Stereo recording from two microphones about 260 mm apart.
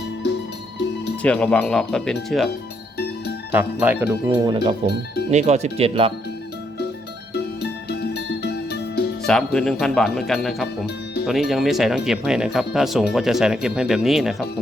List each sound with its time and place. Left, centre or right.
1.2 s speech: centre
3.5 s speech: centre
4.4 s speech: centre
7.3 s music: left
9.2 s speech: centre